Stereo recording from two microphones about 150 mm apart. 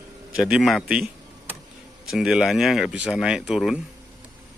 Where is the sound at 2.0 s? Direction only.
5° right (ahead or behind).